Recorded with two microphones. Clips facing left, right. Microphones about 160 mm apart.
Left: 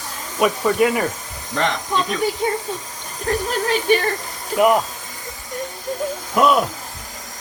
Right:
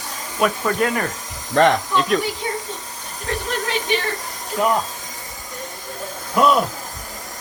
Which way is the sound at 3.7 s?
45° left (ahead or behind).